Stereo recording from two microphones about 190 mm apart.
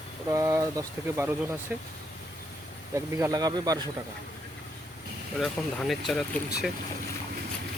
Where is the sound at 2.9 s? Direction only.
15° right (ahead or behind).